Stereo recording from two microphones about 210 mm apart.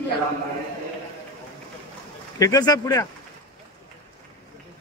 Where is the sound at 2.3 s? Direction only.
15° left (ahead or behind).